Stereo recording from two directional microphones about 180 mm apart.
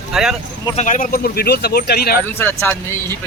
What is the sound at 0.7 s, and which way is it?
Speech, 45° left (ahead or behind).